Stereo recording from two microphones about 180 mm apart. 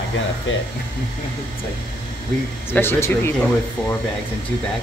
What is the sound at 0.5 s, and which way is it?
Speech, 90° left.